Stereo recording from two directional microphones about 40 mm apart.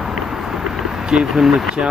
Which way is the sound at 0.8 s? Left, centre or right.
Centre.